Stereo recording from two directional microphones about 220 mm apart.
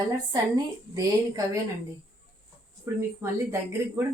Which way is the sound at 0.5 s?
15° right (ahead or behind).